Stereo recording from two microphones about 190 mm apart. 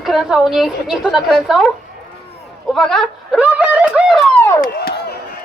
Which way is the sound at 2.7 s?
Centre (ahead or behind).